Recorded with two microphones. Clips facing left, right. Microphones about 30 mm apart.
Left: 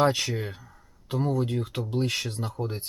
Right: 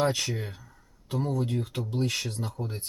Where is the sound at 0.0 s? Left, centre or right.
Centre.